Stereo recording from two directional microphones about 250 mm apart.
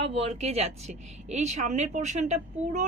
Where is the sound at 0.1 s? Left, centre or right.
Right.